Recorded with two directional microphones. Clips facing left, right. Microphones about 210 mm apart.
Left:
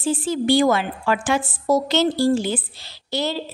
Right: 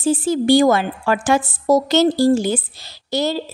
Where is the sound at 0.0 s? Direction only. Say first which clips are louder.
Right 4 dB; 45° right (ahead or behind).